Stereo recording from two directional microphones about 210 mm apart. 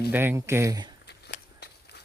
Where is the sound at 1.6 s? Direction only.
50° left (ahead or behind).